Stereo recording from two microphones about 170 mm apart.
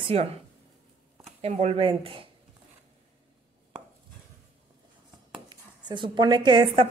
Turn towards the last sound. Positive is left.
turn(degrees=-30)  # may be behind; listen again after turning